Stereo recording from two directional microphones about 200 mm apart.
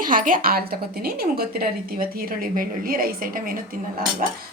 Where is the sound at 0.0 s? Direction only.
40° right (ahead or behind).